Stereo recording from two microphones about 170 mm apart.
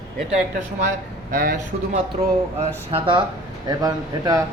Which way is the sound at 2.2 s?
40° right (ahead or behind).